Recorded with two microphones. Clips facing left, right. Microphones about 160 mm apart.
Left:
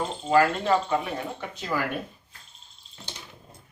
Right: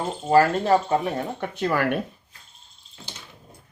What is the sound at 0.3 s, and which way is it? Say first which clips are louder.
Speech: right 3 dB; 40° right (ahead or behind).